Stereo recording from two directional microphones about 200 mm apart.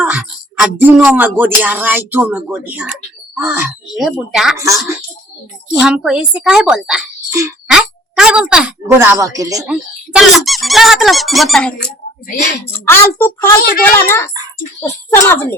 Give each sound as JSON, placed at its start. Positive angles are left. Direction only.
{"t": 0.0, "sound": "music", "side_deg": -5}
{"t": 3.3, "sound": "speech", "side_deg": -10}
{"t": 4.5, "sound": "music", "side_deg": -15}
{"t": 5.8, "sound": "speech", "side_deg": -5}
{"t": 9.6, "sound": "speech", "side_deg": -5}
{"t": 12.6, "sound": "a child's voice", "side_deg": 10}
{"t": 13.6, "sound": "a child's voice", "side_deg": 50}
{"t": 13.8, "sound": "a child's voice", "side_deg": 10}